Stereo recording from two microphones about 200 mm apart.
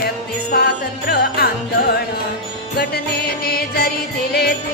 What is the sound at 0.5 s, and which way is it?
Music, 50° left (ahead or behind).